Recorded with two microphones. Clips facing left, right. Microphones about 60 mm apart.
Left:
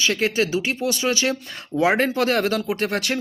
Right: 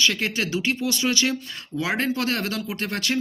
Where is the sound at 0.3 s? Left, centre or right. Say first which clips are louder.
Left 3 dB; centre.